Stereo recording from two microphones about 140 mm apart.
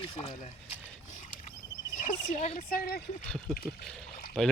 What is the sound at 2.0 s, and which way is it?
Speech, 55° left (ahead or behind).